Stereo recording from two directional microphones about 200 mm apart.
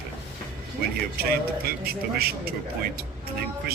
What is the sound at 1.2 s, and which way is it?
Speech, 50° right (ahead or behind).